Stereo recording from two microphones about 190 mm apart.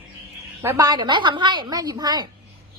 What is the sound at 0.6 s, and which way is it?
A woman's voice, 15° right (ahead or behind).